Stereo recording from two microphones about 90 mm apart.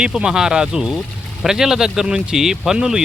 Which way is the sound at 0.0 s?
10° right (ahead or behind).